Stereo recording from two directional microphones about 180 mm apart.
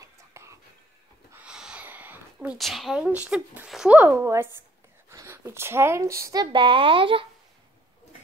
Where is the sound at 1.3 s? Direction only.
5° right (ahead or behind); by 7.2 s 30° right (ahead or behind).